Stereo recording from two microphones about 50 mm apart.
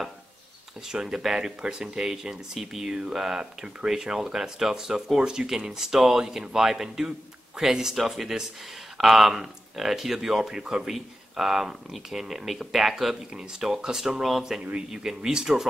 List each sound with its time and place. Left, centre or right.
0.8 s speech: centre
14.6 s speech: right
14.9 s speech: centre